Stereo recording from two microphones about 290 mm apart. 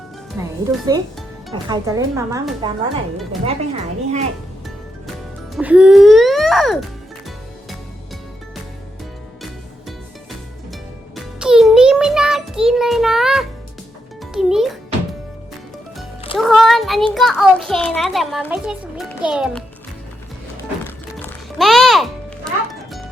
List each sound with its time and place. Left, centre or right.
0.4 s a woman's voice: centre
1.6 s a woman's voice: centre
3.4 s a woman's voice: right
5.5 s music: centre
11.3 s music: centre
14.3 s a child's voice: centre
16.4 s a child's voice: centre
21.6 s a child's voice: centre